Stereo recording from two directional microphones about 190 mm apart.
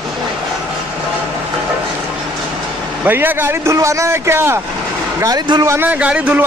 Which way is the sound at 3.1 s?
10° right (ahead or behind).